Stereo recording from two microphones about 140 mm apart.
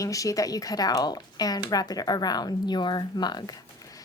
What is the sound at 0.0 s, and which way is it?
Speech, 25° left (ahead or behind).